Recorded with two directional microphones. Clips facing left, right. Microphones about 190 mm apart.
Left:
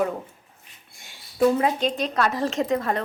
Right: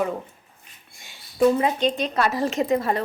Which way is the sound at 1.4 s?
Centre (ahead or behind).